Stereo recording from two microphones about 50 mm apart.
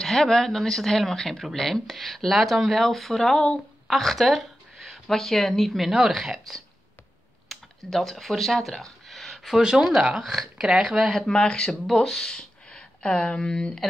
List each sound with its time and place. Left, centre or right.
0.0 s speech: centre
9.1 s a sound: centre
9.6 s speech: centre
10.2 s speech: centre
10.6 s speech: centre
11.1 s speech: centre